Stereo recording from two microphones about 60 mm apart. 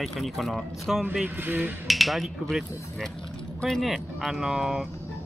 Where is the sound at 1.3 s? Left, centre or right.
Right.